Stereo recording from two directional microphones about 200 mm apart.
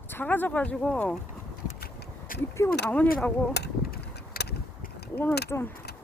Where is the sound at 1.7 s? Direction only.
50° left (ahead or behind).